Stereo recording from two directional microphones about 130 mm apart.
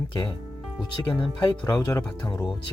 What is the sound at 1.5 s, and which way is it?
Speech, 15° left (ahead or behind).